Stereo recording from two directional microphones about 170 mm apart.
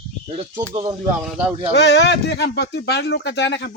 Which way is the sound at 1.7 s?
90° left.